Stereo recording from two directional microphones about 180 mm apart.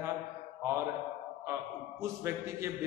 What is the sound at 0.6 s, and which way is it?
Mantra, 15° right (ahead or behind).